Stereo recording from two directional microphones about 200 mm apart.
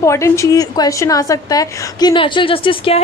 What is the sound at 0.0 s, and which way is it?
A woman's voice, 15° left (ahead or behind).